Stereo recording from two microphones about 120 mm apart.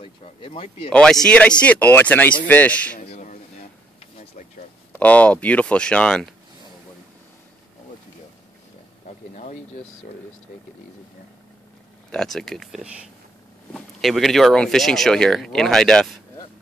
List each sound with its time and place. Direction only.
0.0 s speech: 50° left (ahead or behind)
1.2 s speech: 10° left (ahead or behind)
3.0 s a sound: 85° left
4.9 s speech: 10° left (ahead or behind)
12.1 s speech: 5° left (ahead or behind)